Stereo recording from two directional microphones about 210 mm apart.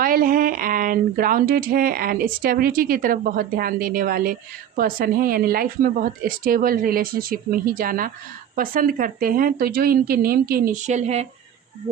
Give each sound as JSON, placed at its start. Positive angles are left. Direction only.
{"t": 0.0, "sound": "speech", "side_deg": -45}